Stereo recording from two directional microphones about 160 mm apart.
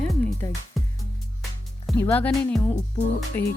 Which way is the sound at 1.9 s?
10° left (ahead or behind).